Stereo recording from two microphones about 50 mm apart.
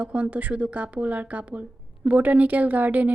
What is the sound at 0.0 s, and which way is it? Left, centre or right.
A woman's voice, right.